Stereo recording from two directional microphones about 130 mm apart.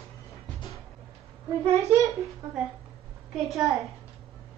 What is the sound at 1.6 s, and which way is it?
Speech, 20° right (ahead or behind).